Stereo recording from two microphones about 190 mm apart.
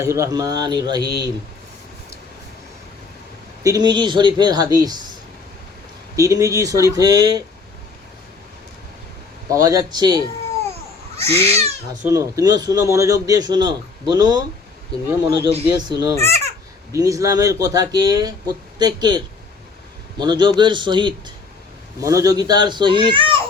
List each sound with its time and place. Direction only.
0.0 s a man's voice: 15° right (ahead or behind)
3.6 s a man's voice: 20° right (ahead or behind)
6.1 s speech: 15° right (ahead or behind)
9.5 s a man's voice: 20° right (ahead or behind)
11.3 s cat: 15° left (ahead or behind)
12.0 s a man's voice: 15° right (ahead or behind)